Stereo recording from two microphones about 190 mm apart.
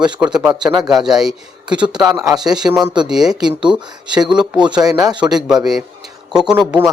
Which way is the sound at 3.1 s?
5° right (ahead or behind).